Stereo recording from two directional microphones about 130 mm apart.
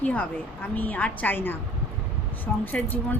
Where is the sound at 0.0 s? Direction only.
10° left (ahead or behind).